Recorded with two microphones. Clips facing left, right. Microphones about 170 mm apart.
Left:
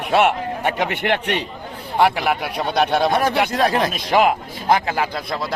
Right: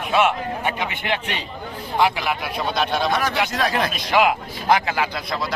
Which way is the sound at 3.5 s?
30° left (ahead or behind).